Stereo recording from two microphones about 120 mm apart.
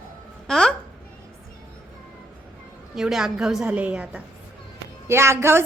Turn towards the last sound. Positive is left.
turn(degrees=-20)  # may be behind; listen again after turning